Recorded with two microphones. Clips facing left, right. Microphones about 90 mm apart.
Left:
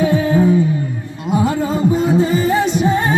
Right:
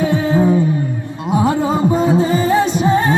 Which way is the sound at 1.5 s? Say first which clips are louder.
Right 2 dB; 35° right (ahead or behind).